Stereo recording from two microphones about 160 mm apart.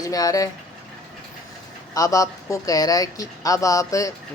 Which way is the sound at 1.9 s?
20° left (ahead or behind).